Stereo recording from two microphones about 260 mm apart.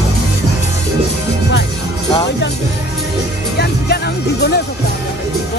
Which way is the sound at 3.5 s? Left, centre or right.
Left.